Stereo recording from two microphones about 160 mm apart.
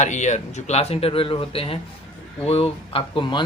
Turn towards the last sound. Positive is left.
turn(degrees=30)  # may be behind; listen again after turning